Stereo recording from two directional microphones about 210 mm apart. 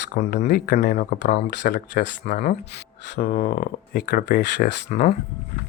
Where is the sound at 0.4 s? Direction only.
50° left (ahead or behind).